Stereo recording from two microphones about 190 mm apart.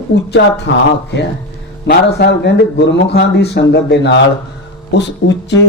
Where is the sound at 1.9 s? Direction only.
60° left (ahead or behind).